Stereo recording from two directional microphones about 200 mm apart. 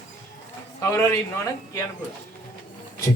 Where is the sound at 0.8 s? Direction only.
15° left (ahead or behind).